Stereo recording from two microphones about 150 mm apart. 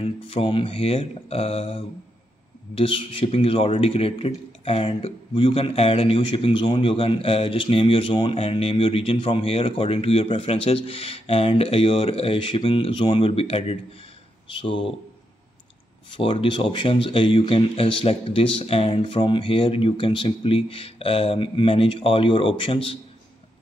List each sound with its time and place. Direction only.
0.0 s a man's voice: 40° left (ahead or behind)
2.8 s a man's voice: 40° left (ahead or behind)
16.2 s a man's voice: 35° left (ahead or behind)